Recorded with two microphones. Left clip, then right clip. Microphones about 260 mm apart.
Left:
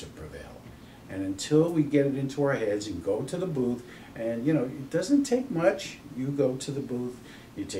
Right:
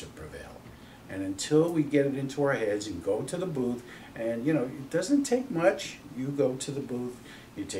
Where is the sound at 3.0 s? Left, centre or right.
Centre.